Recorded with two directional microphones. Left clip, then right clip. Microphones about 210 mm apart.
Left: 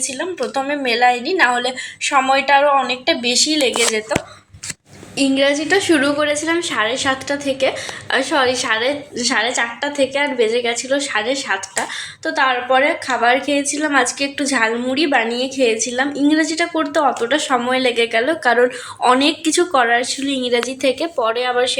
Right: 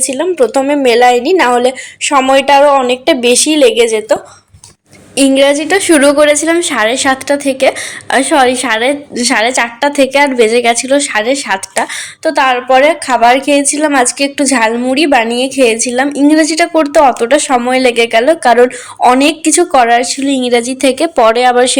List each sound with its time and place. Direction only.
0.1 s a woman's voice: 45° right (ahead or behind)
5.1 s a woman's voice: 45° right (ahead or behind)